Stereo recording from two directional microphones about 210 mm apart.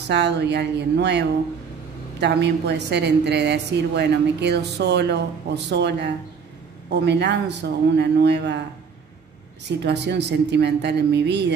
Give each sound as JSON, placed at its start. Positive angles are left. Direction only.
{"t": 0.1, "sound": "a man's voice", "side_deg": -55}
{"t": 9.7, "sound": "a woman's voice", "side_deg": -55}